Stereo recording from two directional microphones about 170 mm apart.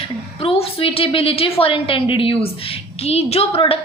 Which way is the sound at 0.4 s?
35° left (ahead or behind).